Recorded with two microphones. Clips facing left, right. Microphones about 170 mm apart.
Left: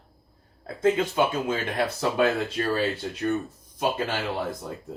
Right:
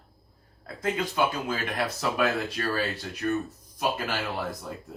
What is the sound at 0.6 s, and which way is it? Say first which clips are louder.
Speech: left 7 dB; 25° left (ahead or behind).